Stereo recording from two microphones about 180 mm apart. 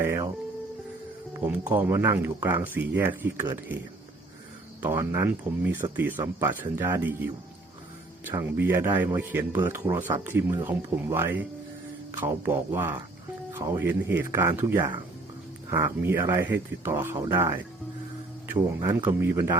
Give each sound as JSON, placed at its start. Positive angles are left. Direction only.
{"t": 0.0, "sound": "speech", "side_deg": -15}
{"t": 1.6, "sound": "speech", "side_deg": -10}
{"t": 4.8, "sound": "speech", "side_deg": -15}
{"t": 8.3, "sound": "speech", "side_deg": -15}